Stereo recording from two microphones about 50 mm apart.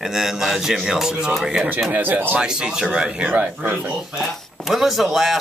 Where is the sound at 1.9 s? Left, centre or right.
Right.